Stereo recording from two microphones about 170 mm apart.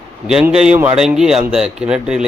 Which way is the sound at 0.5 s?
5° right (ahead or behind).